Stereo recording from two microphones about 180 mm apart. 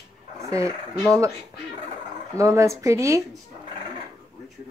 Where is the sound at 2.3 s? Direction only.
15° right (ahead or behind).